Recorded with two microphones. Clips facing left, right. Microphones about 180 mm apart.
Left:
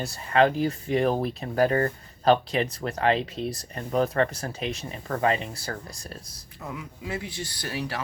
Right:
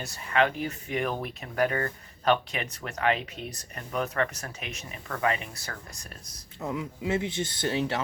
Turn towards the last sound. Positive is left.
turn(degrees=-25)  # may be behind; listen again after turning